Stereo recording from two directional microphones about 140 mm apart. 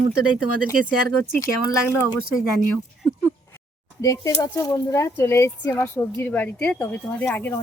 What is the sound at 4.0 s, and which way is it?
Speech, 25° left (ahead or behind).